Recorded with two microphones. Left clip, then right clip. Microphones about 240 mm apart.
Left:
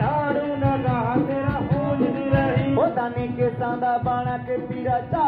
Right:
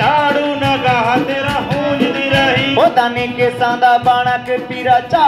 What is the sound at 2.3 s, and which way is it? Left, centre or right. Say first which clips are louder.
Music: right 12 dB; right.